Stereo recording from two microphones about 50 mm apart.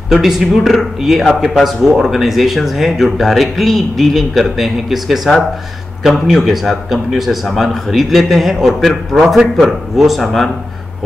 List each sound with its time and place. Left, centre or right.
0.1 s speech: centre